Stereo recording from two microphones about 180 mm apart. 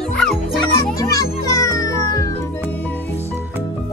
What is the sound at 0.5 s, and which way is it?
Music, 20° left (ahead or behind).